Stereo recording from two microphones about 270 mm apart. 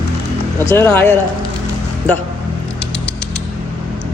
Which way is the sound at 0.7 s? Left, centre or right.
Centre.